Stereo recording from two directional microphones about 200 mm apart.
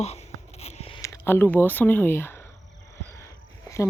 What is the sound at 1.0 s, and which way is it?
Speech, 15° left (ahead or behind).